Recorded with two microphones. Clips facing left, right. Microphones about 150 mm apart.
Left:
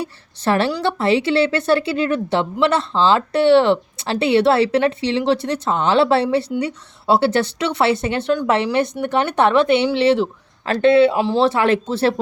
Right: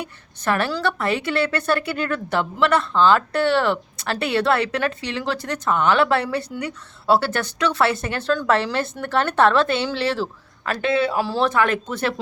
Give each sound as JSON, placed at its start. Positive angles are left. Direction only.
{"t": 0.0, "sound": "speech", "side_deg": 30}